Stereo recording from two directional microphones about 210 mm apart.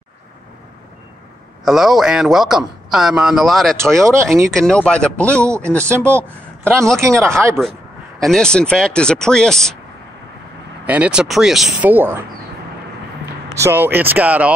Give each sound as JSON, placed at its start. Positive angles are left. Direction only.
{"t": 1.6, "sound": "a man's voice", "side_deg": 0}
{"t": 3.7, "sound": "speech", "side_deg": -15}
{"t": 4.5, "sound": "a man's voice", "side_deg": 5}
{"t": 5.4, "sound": "speech", "side_deg": -15}
{"t": 5.7, "sound": "speech", "side_deg": 5}
{"t": 6.0, "sound": "speech", "side_deg": -10}
{"t": 6.6, "sound": "a man's voice", "side_deg": 0}
{"t": 8.2, "sound": "a man's voice", "side_deg": 5}
{"t": 10.9, "sound": "a man's voice", "side_deg": -5}
{"t": 13.6, "sound": "speech", "side_deg": -10}